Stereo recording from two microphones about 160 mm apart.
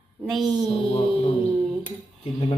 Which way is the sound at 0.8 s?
40° left (ahead or behind).